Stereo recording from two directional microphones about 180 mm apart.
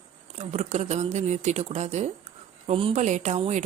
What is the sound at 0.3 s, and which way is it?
Speech, 40° right (ahead or behind).